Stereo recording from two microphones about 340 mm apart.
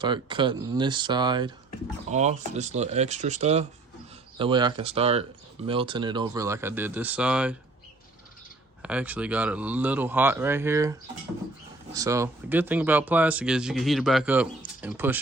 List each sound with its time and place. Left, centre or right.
0.0 s speech: centre
8.8 s speech: centre
11.9 s speech: centre